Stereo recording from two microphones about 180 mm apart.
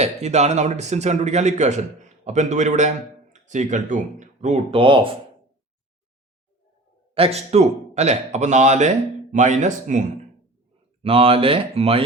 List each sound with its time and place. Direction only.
0.0 s a man's voice: 40° right (ahead or behind)
7.1 s a man's voice: 35° right (ahead or behind)
11.0 s a man's voice: 30° right (ahead or behind)